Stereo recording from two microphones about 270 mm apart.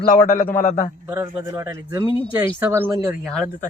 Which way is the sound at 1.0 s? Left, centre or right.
Centre.